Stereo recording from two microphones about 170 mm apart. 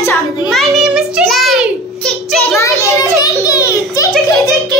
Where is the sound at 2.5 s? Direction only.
15° left (ahead or behind).